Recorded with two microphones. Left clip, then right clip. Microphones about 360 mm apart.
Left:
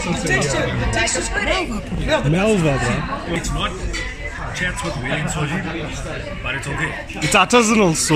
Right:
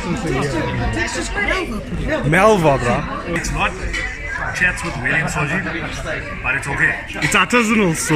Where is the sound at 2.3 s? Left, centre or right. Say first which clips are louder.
Right 10 dB; right.